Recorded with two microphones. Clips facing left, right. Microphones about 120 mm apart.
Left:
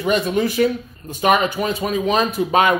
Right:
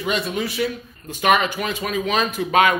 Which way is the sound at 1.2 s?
30° left (ahead or behind).